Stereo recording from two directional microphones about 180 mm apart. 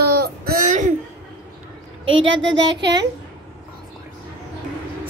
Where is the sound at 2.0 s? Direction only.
90° right.